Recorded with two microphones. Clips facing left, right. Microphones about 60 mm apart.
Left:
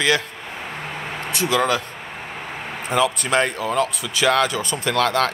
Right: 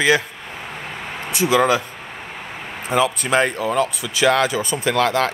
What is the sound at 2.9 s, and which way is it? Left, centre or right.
Speech, centre.